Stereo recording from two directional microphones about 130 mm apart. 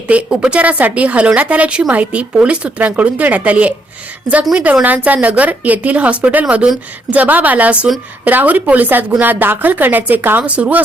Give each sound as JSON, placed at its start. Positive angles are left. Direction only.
{"t": 0.1, "sound": "a woman's voice", "side_deg": -10}